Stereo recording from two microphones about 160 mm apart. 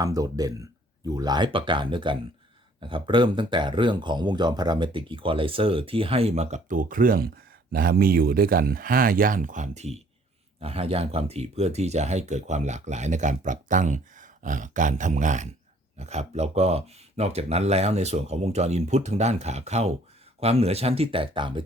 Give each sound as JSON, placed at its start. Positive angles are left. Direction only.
{"t": 0.0, "sound": "speech", "side_deg": -20}